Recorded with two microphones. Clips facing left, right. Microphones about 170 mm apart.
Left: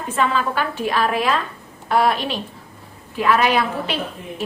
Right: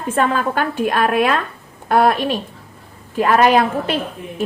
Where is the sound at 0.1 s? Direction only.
50° right (ahead or behind).